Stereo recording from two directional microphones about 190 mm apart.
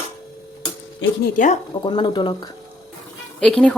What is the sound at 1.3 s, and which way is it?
Speech, 40° left (ahead or behind).